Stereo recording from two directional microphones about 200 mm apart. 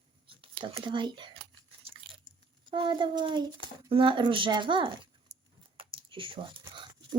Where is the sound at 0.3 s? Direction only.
25° right (ahead or behind).